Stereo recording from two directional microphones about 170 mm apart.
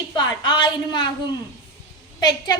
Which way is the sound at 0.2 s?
25° left (ahead or behind).